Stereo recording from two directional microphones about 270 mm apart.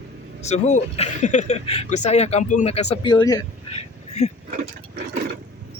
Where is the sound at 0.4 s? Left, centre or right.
Left.